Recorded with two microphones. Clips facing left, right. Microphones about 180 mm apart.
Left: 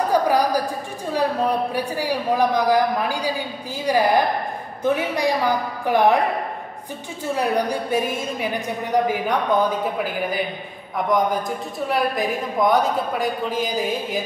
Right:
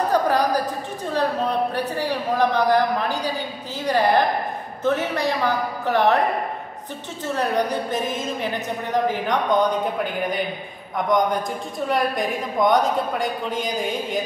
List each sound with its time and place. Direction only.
0.1 s a sound: 10° left (ahead or behind)
1.1 s speech: 10° left (ahead or behind)
7.2 s a woman's voice: 10° left (ahead or behind)